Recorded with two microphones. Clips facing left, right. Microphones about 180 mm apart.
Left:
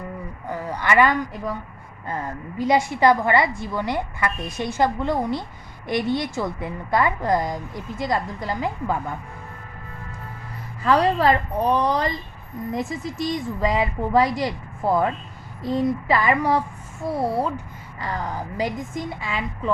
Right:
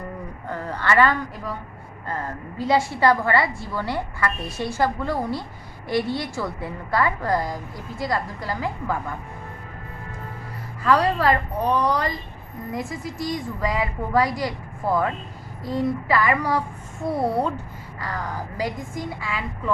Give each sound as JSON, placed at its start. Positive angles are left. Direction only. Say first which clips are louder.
{"t": 0.4, "sound": "speech", "louder": "left 1 dB", "side_deg": 10}
{"t": 2.6, "sound": "a woman's voice", "louder": "left 1 dB", "side_deg": 15}
{"t": 10.8, "sound": "a woman's voice", "louder": "left 1 dB", "side_deg": 25}
{"t": 17.0, "sound": "a woman's voice", "louder": "right 1 dB", "side_deg": 0}
{"t": 18.0, "sound": "a woman's voice", "louder": "left 2 dB", "side_deg": 20}